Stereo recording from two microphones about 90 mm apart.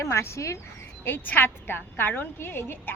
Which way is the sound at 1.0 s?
20° left (ahead or behind).